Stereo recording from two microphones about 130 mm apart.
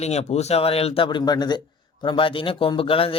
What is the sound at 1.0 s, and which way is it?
A man's voice, 35° left (ahead or behind).